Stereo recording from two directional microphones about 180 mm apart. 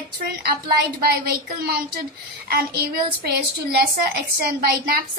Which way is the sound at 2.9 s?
60° right (ahead or behind).